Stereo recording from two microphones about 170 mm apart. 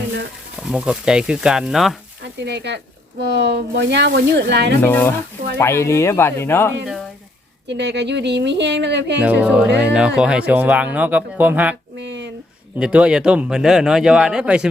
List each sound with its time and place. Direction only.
0.7 s speech: 5° right (ahead or behind)
2.4 s speech: 80° right
4.8 s speech: 15° left (ahead or behind)
6.8 s a sound: centre (ahead or behind)
7.7 s speech: 90° right
9.2 s speech: 5° right (ahead or behind)
11.9 s a sound: 90° right
12.8 s speech: 5° right (ahead or behind)